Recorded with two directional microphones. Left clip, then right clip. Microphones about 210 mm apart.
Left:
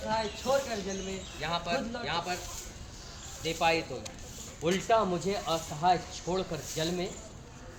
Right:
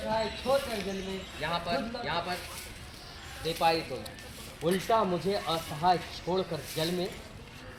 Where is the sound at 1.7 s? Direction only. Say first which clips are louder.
Even; 45° left (ahead or behind).